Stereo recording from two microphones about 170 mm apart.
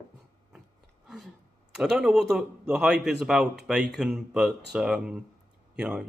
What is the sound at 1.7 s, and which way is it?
Speech, 5° right (ahead or behind).